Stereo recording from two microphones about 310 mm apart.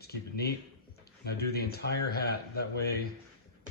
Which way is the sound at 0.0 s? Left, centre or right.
Left.